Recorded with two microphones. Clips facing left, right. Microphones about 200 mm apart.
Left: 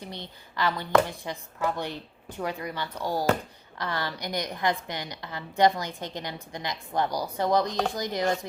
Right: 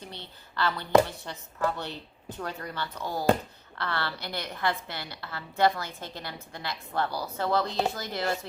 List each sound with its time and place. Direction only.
0.1 s a woman's voice: 15° left (ahead or behind)